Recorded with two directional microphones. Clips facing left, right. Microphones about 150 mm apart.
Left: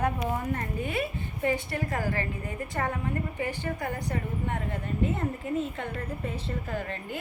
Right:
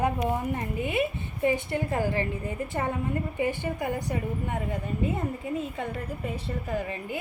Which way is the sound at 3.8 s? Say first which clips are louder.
Right 5 dB; 15° right (ahead or behind).